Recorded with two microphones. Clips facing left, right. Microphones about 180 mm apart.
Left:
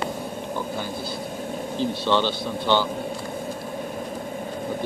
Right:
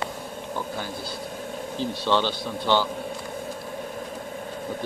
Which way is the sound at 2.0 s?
5° right (ahead or behind).